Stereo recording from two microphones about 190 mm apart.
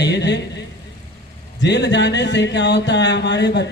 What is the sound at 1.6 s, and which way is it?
A man's voice, 65° left (ahead or behind).